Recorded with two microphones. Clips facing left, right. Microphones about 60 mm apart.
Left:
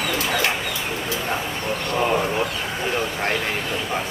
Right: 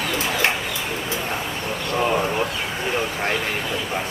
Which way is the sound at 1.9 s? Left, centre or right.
Centre.